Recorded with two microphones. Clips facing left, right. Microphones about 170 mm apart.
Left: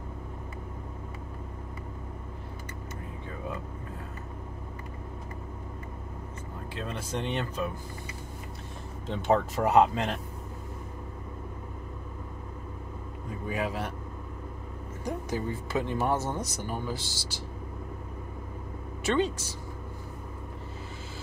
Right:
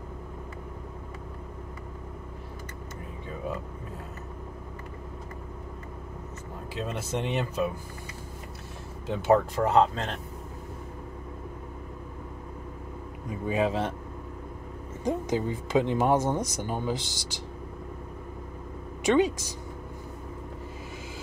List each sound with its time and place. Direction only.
6.8 s speech: 10° right (ahead or behind)
9.0 s speech: 5° right (ahead or behind)
9.6 s speech: 10° left (ahead or behind)
13.3 s speech: 20° right (ahead or behind)
15.0 s speech: 20° right (ahead or behind)
19.0 s speech: 15° right (ahead or behind)